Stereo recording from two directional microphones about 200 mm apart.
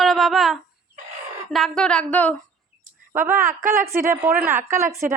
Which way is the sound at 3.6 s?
45° right (ahead or behind).